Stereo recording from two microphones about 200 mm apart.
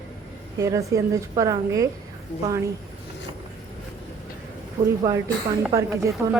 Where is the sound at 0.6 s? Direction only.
15° right (ahead or behind).